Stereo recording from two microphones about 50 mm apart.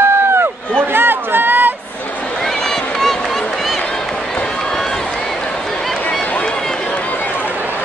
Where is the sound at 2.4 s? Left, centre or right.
Centre.